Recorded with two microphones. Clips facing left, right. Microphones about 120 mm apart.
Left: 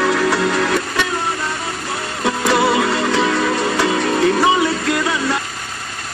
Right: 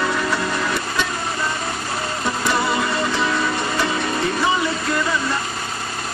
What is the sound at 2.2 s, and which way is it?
Music, 75° left (ahead or behind).